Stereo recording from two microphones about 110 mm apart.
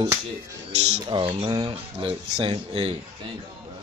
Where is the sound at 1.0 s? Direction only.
50° right (ahead or behind).